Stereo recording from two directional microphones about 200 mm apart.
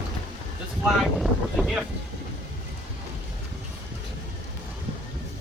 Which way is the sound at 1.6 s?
Centre (ahead or behind).